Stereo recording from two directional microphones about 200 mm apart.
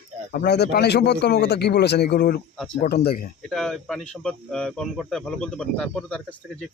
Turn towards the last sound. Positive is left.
turn(degrees=5)  # may be behind; listen again after turning